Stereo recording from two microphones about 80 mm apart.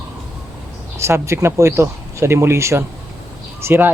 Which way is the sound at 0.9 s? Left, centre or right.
Right.